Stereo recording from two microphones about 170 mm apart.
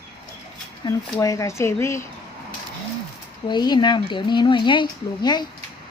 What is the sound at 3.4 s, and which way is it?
Speech, 25° left (ahead or behind).